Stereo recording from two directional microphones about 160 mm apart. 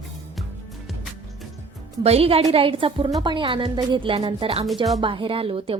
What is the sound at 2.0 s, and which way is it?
Speech, 40° right (ahead or behind).